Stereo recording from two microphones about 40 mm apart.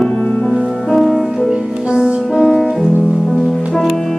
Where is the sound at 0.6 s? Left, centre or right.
Centre.